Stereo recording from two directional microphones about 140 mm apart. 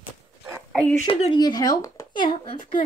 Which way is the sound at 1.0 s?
40° left (ahead or behind).